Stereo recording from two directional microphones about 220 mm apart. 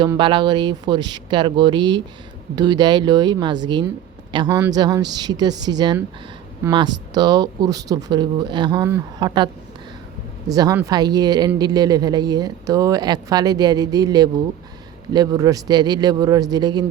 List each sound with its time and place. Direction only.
0.0 s a man's voice: 20° right (ahead or behind)
10.5 s speech: 15° right (ahead or behind)